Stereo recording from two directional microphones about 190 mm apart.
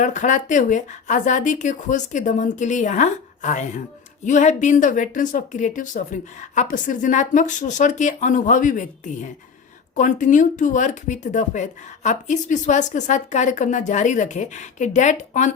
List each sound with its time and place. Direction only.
0.0 s speech: 40° left (ahead or behind)